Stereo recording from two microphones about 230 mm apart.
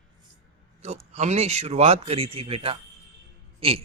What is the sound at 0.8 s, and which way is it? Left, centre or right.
Speech, right.